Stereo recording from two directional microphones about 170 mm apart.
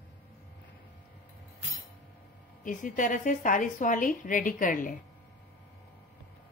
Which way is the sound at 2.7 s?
50° left (ahead or behind).